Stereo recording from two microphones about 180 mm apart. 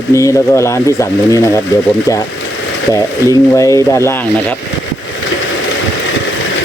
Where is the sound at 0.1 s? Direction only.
15° left (ahead or behind).